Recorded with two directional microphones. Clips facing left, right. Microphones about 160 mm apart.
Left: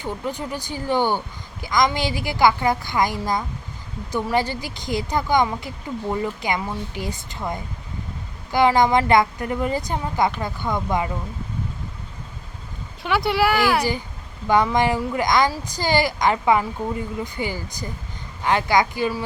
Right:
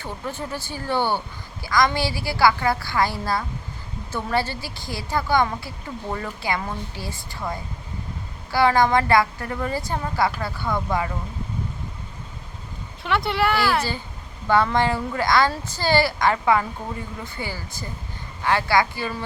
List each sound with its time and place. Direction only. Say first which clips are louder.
0.0 s speech: left 3 dB; 15° left (ahead or behind)
13.0 s speech: left 2 dB; 5° left (ahead or behind)
13.6 s speech: left 3 dB; 15° left (ahead or behind)